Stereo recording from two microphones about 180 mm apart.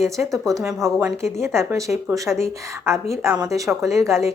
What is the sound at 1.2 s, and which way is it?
A woman's voice, 15° right (ahead or behind).